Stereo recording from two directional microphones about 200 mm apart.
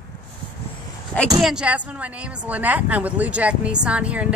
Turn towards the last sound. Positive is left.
turn(degrees=-5)  # may be behind; listen again after turning